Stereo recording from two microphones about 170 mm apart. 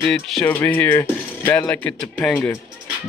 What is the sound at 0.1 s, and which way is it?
Speech, 5° left (ahead or behind).